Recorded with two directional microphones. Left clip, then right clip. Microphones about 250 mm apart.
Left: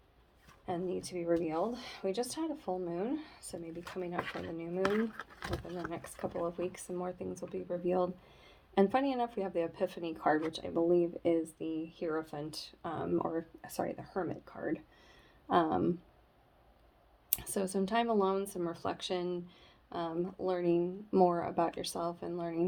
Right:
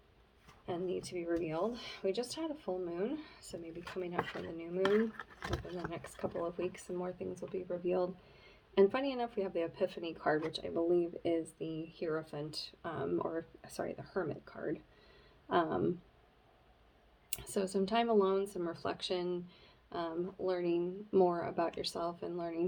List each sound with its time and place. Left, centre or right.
0.6 s speech: left
4.3 s speech: centre
4.5 s speech: left
4.8 s speech: centre
6.6 s speech: left
17.5 s speech: left